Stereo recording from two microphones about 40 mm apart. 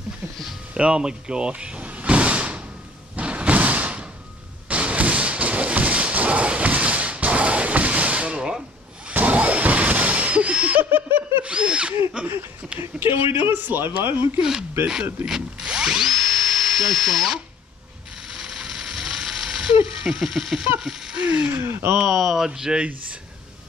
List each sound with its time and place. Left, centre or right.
0.7 s speech: right
1.8 s sliding door: right
3.2 s thump: right
4.6 s a sound: right
10.8 s snicker: right
11.4 s drill: right
13.0 s speech: right
15.2 s ratchet: centre
16.0 s drill: centre
18.3 s ratchet: centre
20.8 s a sound: centre
21.9 s speech: centre
22.5 s speech: centre